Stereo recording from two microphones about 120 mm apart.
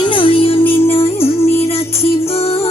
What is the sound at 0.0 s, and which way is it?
Music, 45° left (ahead or behind).